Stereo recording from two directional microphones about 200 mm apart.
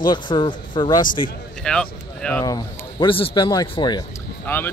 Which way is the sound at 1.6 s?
5° left (ahead or behind).